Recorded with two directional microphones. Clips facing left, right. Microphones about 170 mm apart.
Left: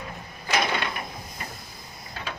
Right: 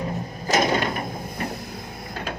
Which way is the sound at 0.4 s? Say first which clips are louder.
Right 5 dB; 45° right (ahead or behind).